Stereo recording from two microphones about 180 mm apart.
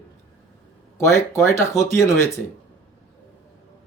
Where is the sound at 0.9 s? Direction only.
15° left (ahead or behind).